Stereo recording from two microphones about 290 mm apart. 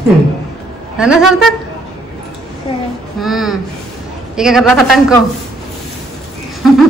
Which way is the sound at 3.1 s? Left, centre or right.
Centre.